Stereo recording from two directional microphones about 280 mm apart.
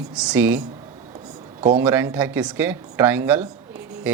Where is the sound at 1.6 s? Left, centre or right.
Centre.